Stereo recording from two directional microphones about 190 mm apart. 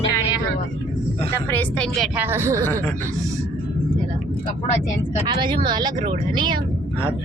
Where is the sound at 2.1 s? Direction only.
10° right (ahead or behind).